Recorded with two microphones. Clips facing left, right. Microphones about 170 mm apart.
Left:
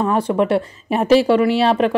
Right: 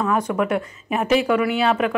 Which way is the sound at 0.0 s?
30° left (ahead or behind).